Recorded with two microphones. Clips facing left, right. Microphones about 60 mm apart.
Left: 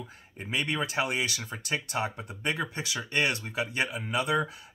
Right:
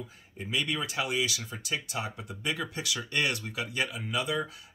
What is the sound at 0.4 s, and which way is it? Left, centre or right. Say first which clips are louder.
Speech: left 1 dB; left.